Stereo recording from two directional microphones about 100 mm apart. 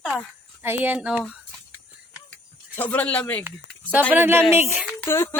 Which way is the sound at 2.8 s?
15° left (ahead or behind).